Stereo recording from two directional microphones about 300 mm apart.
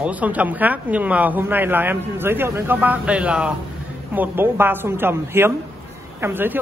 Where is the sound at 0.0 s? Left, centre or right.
Centre.